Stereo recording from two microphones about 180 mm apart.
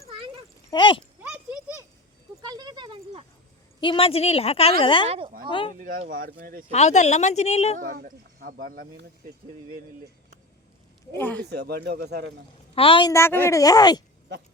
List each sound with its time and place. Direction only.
0.7 s speech: 25° left (ahead or behind)
1.2 s a sound: 5° right (ahead or behind)
2.4 s a sound: 20° right (ahead or behind)
3.8 s speech: 30° left (ahead or behind)
5.0 s speech: 35° right (ahead or behind)
5.5 s speech: 30° left (ahead or behind)
6.1 s speech: 50° right (ahead or behind)
6.7 s speech: 40° left (ahead or behind)
7.8 s speech: 50° right (ahead or behind)
11.1 s speech: 10° left (ahead or behind)
11.4 s speech: 65° right (ahead or behind)
12.7 s speech: 30° left (ahead or behind)
13.1 s speech: 15° left (ahead or behind)